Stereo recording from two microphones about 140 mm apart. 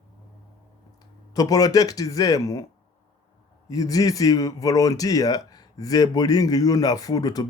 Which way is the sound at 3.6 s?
25° left (ahead or behind).